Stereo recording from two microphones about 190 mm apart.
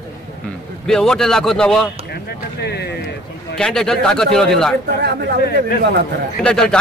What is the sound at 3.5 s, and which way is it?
Speech, 5° left (ahead or behind).